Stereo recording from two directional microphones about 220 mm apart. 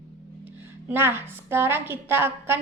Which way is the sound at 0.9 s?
10° right (ahead or behind).